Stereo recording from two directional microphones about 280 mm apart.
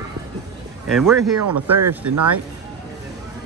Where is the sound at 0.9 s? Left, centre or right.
Centre.